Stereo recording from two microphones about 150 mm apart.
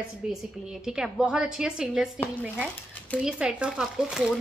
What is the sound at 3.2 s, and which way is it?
A woman's voice, 5° right (ahead or behind).